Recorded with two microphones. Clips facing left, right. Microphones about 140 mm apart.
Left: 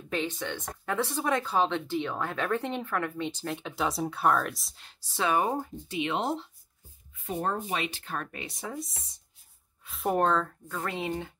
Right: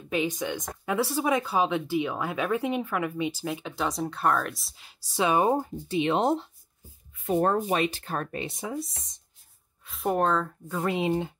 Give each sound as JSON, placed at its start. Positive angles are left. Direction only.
{"t": 0.1, "sound": "speech", "side_deg": -10}
{"t": 5.1, "sound": "speech", "side_deg": -20}
{"t": 5.6, "sound": "speech", "side_deg": -35}
{"t": 7.2, "sound": "speech", "side_deg": -60}
{"t": 9.8, "sound": "speech", "side_deg": 0}
{"t": 10.7, "sound": "speech", "side_deg": -15}